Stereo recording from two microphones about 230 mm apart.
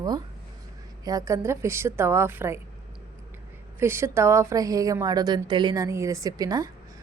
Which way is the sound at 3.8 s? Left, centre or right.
Centre.